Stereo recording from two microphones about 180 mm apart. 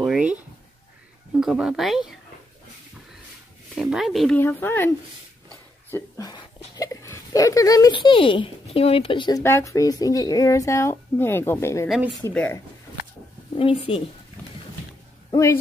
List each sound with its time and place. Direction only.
0.0 s writing: 5° right (ahead or behind)
1.4 s speech: 5° right (ahead or behind)
3.7 s speech: 5° right (ahead or behind)
4.4 s speech: 10° left (ahead or behind)
9.4 s speech: 15° left (ahead or behind)
13.6 s a woman's voice: 30° left (ahead or behind)